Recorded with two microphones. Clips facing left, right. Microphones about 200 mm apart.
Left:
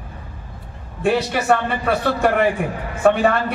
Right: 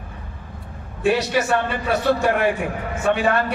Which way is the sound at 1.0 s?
55° left (ahead or behind).